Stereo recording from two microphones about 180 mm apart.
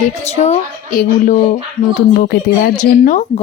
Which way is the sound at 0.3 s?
40° left (ahead or behind).